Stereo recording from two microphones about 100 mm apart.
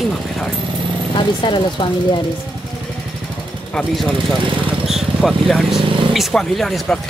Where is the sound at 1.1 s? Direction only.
55° left (ahead or behind).